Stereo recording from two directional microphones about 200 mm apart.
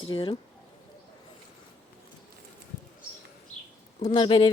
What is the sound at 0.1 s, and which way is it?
Speech, 25° left (ahead or behind).